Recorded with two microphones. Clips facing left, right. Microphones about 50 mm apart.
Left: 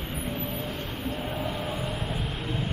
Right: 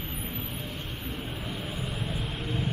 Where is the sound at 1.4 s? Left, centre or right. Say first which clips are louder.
Left 5 dB; left.